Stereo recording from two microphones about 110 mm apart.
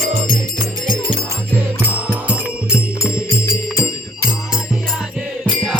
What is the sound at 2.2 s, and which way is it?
Music, 10° right (ahead or behind).